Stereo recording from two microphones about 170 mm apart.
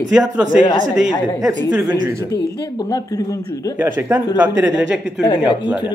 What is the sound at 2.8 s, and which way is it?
Speech, 20° left (ahead or behind).